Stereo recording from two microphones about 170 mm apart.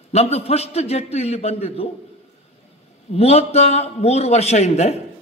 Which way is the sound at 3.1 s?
35° left (ahead or behind).